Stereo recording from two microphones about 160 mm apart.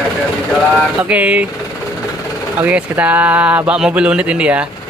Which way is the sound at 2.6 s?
10° right (ahead or behind).